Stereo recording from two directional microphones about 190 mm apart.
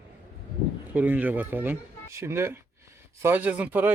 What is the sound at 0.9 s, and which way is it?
Speech, 10° right (ahead or behind).